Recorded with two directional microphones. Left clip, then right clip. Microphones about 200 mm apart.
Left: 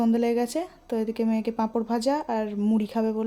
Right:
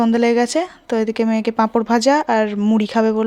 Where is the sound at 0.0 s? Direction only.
15° right (ahead or behind).